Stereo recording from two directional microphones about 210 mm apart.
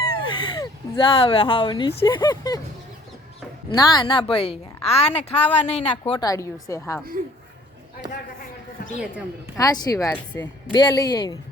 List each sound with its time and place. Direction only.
0.0 s speech: 20° left (ahead or behind)
3.8 s a woman's voice: 20° left (ahead or behind)
6.1 s speech: 15° left (ahead or behind)
9.6 s a woman's voice: 15° left (ahead or behind)